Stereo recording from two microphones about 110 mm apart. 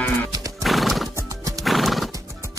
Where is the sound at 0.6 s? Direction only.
Centre (ahead or behind).